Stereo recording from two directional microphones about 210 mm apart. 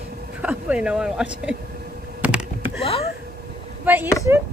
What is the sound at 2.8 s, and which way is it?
Speech, 30° left (ahead or behind).